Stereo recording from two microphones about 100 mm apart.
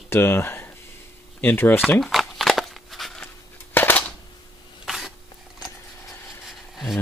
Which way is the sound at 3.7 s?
20° left (ahead or behind).